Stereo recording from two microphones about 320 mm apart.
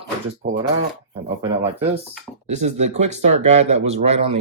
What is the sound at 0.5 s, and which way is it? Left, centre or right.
Speech, centre.